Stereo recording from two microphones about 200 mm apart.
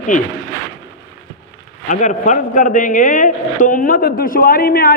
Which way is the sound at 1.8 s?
40° left (ahead or behind).